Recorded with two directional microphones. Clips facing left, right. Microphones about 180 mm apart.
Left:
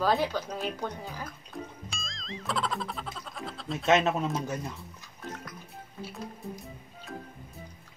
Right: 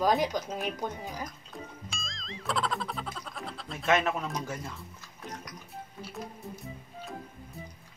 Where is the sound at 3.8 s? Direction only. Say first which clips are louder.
Left 3 dB; 25° left (ahead or behind).